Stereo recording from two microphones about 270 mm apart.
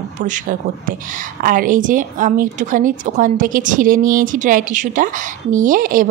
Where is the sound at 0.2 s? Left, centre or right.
Right.